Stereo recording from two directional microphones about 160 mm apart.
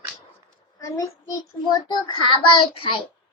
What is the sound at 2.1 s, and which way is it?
Speech, 30° left (ahead or behind).